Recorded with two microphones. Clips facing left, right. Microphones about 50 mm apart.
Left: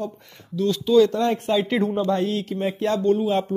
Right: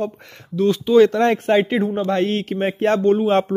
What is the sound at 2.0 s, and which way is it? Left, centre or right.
Speech, right.